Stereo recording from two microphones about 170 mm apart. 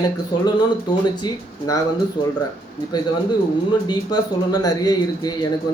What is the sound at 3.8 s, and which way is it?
Speech, 25° left (ahead or behind).